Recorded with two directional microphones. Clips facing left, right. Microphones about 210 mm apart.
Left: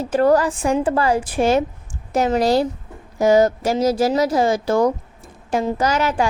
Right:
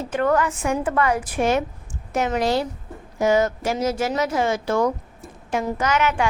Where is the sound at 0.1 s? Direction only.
35° left (ahead or behind).